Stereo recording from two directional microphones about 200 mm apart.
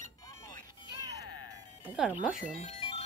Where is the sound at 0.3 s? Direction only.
15° left (ahead or behind).